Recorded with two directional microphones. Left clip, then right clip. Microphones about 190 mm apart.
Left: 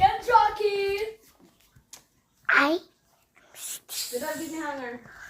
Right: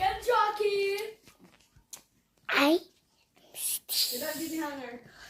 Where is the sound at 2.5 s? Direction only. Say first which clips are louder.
Left 4 dB; 20° right (ahead or behind).